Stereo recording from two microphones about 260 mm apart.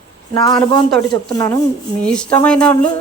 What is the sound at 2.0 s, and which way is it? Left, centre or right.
Speech, centre.